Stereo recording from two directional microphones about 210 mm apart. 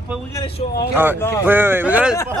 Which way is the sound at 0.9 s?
10° right (ahead or behind).